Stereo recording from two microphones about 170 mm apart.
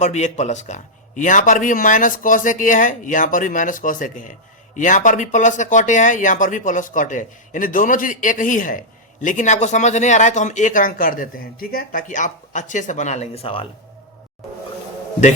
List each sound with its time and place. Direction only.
0.0 s speech: 45° left (ahead or behind)